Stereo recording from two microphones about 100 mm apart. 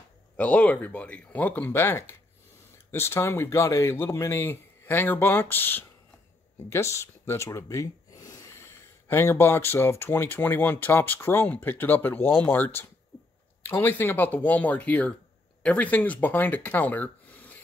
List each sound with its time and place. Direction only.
0.4 s speech: 15° left (ahead or behind); by 8.6 s 35° left (ahead or behind)
9.1 s speech: 25° left (ahead or behind)